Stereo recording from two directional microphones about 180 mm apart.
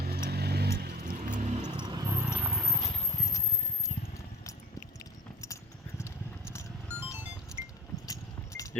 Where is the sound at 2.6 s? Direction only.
15° left (ahead or behind).